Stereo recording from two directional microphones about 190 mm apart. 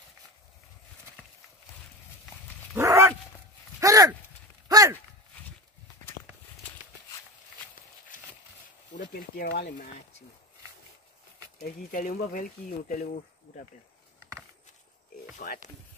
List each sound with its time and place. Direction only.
2.7 s dog: 15° right (ahead or behind)
3.8 s a sound: 20° right (ahead or behind)
8.1 s a sound: 45° left (ahead or behind)
9.0 s speech: 55° left (ahead or behind)
11.6 s speech: 45° left (ahead or behind)
15.3 s speech: 40° left (ahead or behind)